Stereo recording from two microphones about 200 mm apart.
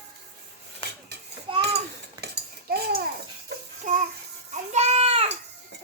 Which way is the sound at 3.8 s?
35° right (ahead or behind).